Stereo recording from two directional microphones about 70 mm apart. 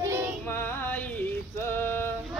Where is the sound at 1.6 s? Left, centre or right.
Left.